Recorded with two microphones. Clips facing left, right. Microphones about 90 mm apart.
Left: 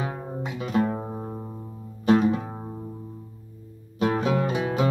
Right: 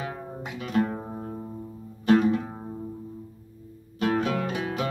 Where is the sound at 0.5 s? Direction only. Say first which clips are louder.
Left 1 dB; 5° left (ahead or behind).